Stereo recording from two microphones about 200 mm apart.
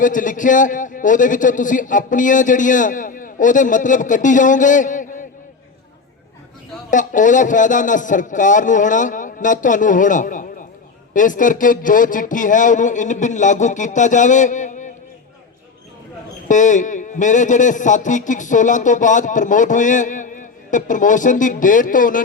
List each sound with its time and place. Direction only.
0.0 s a man's voice: 40° left (ahead or behind)
6.9 s a man's voice: 40° left (ahead or behind)
16.5 s a man's voice: 40° left (ahead or behind)